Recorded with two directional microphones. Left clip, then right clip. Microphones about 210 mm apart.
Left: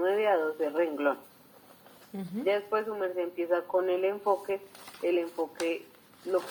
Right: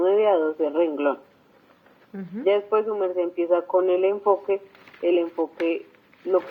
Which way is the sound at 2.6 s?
30° right (ahead or behind).